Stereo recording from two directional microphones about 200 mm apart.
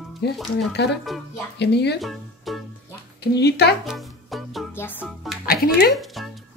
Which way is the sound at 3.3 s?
55° left (ahead or behind).